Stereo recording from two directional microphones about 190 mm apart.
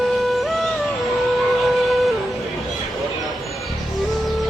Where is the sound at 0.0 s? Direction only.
Centre (ahead or behind).